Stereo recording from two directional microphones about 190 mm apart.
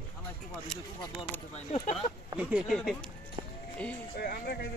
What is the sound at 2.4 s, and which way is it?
Speech, 5° right (ahead or behind).